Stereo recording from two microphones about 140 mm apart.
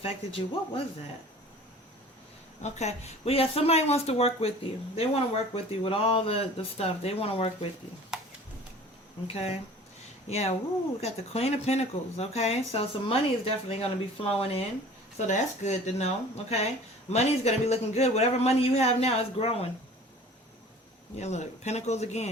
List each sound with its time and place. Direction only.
0.0 s speech: 40° left (ahead or behind)
2.6 s speech: 55° left (ahead or behind)
8.1 s a sound: 5° right (ahead or behind)
9.2 s speech: 45° left (ahead or behind)
15.3 s speech: 55° left (ahead or behind)
21.2 s speech: 55° left (ahead or behind)